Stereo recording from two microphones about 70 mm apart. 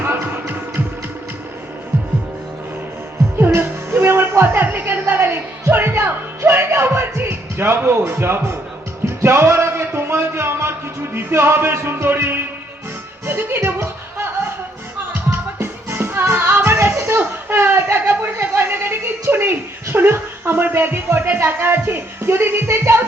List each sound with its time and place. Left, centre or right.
0.0 s music: right
3.3 s music: right
9.0 s a sound: right
13.2 s speech: right
15.6 s music: right
17.1 s a sound: right